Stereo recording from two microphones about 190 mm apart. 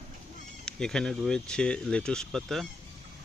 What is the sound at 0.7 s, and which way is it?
Speech, 5° left (ahead or behind).